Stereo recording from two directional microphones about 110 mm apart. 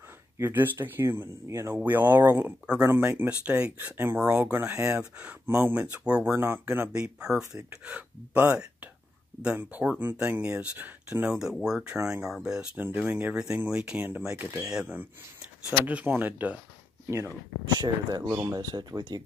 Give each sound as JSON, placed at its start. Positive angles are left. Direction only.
{"t": 0.4, "sound": "speech", "side_deg": -20}
{"t": 7.0, "sound": "speech", "side_deg": -10}
{"t": 14.7, "sound": "speech", "side_deg": -10}
{"t": 17.7, "sound": "speech", "side_deg": -35}